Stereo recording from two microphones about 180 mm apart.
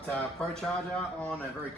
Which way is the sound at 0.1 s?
5° left (ahead or behind).